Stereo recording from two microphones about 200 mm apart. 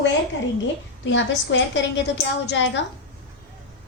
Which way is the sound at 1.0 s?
65° left (ahead or behind).